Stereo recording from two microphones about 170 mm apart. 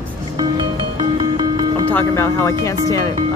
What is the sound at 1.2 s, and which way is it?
Music, 30° right (ahead or behind).